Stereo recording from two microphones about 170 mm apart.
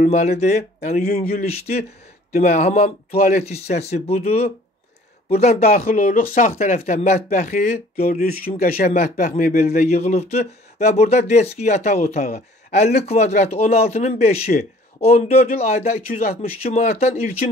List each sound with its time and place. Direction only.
0.0 s speech: 45° left (ahead or behind); by 1.4 s 60° left (ahead or behind)
1.4 s speech: 35° left (ahead or behind)
8.0 s speech: 60° left (ahead or behind)
9.8 s speech: 40° left (ahead or behind)